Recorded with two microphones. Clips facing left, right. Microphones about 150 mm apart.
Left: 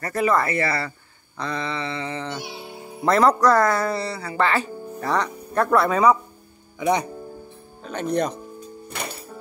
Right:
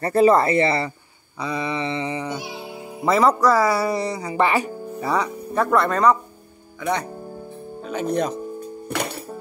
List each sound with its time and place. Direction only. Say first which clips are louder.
0.0 s speech: right 6 dB; 30° right (ahead or behind)
1.4 s a sound: right 3 dB; 10° right (ahead or behind)
3.1 s speech: even; 5° right (ahead or behind)
6.8 s speech: left 3 dB; 15° left (ahead or behind)
7.8 s speech: right 1 dB; 5° right (ahead or behind)
8.9 s music: right 6 dB; 70° right (ahead or behind)